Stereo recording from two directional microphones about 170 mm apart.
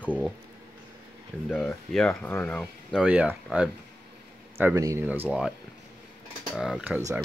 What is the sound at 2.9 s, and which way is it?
Speech, 5° right (ahead or behind).